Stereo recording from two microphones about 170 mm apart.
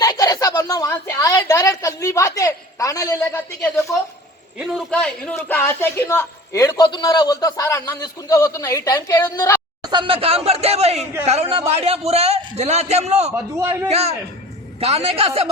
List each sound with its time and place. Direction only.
0.0 s a sound: 20° left (ahead or behind)
4.5 s speech: 5° right (ahead or behind)
4.9 s a man's voice: 5° left (ahead or behind)
9.8 s a man's voice: 30° right (ahead or behind)
13.3 s a man's voice: 15° right (ahead or behind)
13.8 s a man's voice: 40° right (ahead or behind)